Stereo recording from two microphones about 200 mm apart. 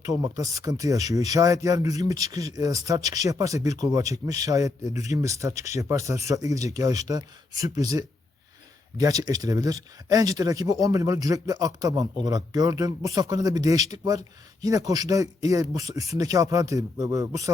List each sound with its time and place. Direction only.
0.0 s speech: 15° right (ahead or behind)